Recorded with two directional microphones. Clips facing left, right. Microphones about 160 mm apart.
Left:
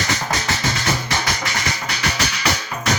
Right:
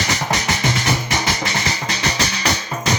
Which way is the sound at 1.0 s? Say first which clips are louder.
Right 2 dB; 25° right (ahead or behind).